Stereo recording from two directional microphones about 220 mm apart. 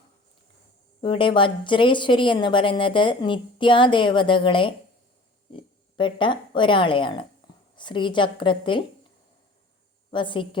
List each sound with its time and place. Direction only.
1.0 s speech: 20° left (ahead or behind)
10.1 s speech: 20° left (ahead or behind)